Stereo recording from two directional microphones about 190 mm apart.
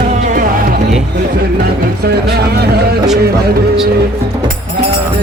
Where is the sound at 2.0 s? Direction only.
55° right (ahead or behind).